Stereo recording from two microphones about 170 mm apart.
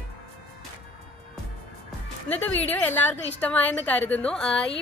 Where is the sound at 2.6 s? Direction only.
10° left (ahead or behind).